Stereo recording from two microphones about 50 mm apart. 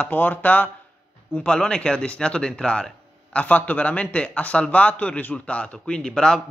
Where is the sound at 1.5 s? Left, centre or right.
Centre.